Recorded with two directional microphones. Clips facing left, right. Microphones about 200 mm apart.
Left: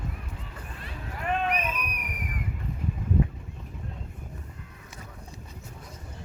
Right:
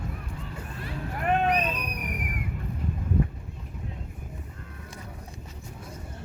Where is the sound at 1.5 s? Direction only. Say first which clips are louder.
Right 4 dB; 35° right (ahead or behind).